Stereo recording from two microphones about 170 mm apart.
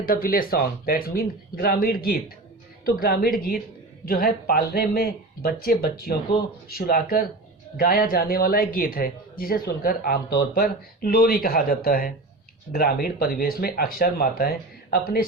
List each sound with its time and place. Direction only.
0.1 s a man's voice: 60° left (ahead or behind)